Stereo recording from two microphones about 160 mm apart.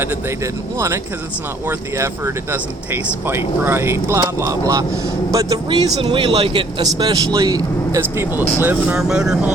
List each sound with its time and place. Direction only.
0.0 s speech: 15° right (ahead or behind)